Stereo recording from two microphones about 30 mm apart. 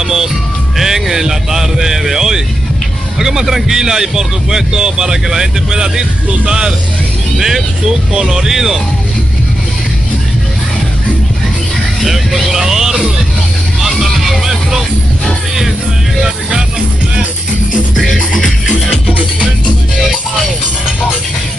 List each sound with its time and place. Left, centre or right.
0.0 s music: centre
3.2 s a man's voice: centre
7.3 s speech: centre
12.0 s speech: centre
12.6 s speech: centre
13.7 s music: centre
16.2 s speech: right
17.9 s music: centre